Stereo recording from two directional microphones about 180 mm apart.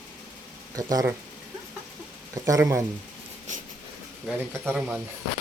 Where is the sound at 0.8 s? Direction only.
20° right (ahead or behind).